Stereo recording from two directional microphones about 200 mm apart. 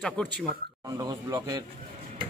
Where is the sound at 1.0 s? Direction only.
20° right (ahead or behind).